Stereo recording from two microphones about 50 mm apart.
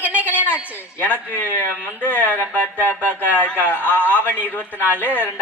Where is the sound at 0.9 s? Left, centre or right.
Left.